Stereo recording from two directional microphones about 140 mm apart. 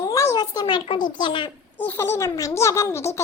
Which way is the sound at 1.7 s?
15° left (ahead or behind).